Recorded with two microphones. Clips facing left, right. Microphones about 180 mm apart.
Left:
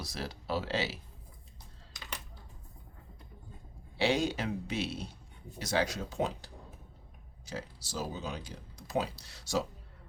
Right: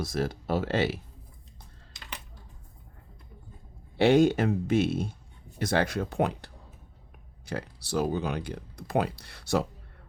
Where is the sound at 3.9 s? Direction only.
55° right (ahead or behind).